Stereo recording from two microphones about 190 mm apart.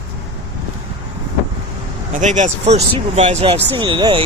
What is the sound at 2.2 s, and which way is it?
Speech, 40° right (ahead or behind).